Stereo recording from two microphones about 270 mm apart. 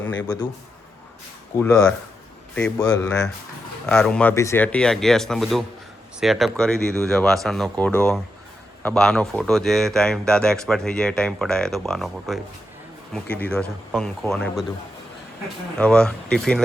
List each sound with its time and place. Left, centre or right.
0.0 s a sound: left
1.5 s speech: centre
15.8 s speech: centre